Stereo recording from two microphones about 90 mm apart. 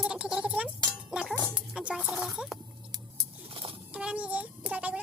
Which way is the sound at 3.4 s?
80° right.